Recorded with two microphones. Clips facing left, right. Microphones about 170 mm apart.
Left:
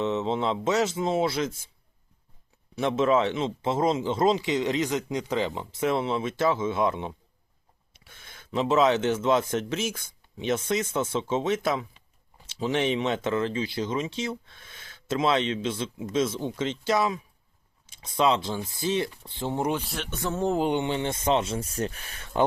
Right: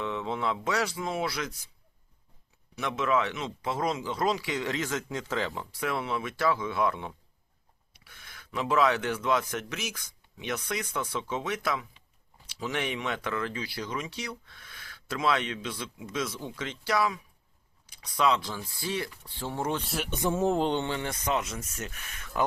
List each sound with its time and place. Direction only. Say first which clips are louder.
0.0 s a man's voice: left 5 dB; 25° left (ahead or behind)
2.7 s a man's voice: left 5 dB; 30° left (ahead or behind)
19.8 s speech: right 1 dB; centre (ahead or behind)
20.1 s speech: right 3 dB; 15° right (ahead or behind)
20.4 s speech: left 2 dB; centre (ahead or behind)
20.7 s a man's voice: left 4 dB; 15° left (ahead or behind)